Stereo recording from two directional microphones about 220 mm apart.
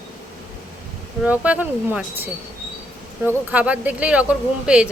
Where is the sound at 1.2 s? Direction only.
5° right (ahead or behind).